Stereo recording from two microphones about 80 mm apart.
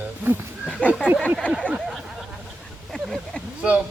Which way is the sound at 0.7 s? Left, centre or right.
Centre.